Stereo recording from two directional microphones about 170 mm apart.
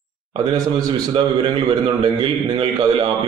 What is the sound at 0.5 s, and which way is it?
A man's voice, 25° right (ahead or behind).